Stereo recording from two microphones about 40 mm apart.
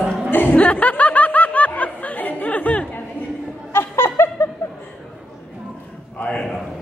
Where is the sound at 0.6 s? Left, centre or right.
Left.